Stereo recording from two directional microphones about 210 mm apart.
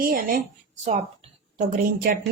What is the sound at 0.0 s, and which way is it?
Speech, 40° right (ahead or behind).